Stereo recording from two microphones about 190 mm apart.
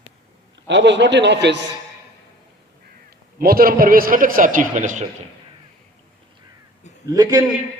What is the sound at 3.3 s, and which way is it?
A man's voice, 50° right (ahead or behind).